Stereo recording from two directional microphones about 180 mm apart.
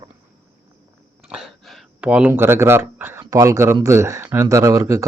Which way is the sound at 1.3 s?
Centre (ahead or behind).